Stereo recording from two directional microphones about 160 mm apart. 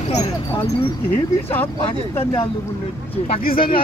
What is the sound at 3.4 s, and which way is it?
Speech, 65° left (ahead or behind).